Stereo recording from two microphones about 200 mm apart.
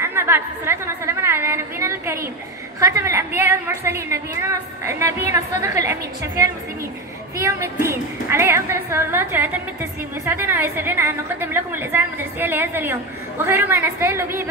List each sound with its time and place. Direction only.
0.0 s a woman's voice: 10° right (ahead or behind)